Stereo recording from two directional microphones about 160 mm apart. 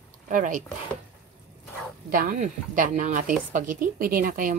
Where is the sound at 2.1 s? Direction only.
60° right (ahead or behind).